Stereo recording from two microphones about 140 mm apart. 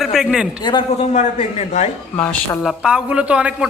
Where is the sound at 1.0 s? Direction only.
55° left (ahead or behind).